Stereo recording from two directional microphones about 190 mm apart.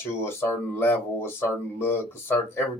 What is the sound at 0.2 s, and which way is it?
Speech, 10° left (ahead or behind).